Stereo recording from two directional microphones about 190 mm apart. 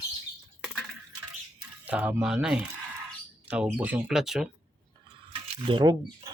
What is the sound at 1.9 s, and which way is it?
Speech, 10° right (ahead or behind).